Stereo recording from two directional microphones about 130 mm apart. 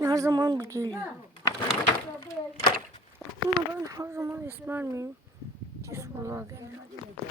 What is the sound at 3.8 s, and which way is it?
A woman's voice, 25° right (ahead or behind).